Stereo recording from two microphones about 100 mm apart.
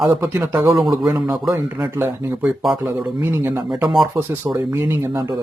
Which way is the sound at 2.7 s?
20° right (ahead or behind).